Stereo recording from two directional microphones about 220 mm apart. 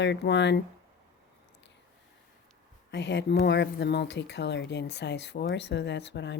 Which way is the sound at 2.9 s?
50° left (ahead or behind).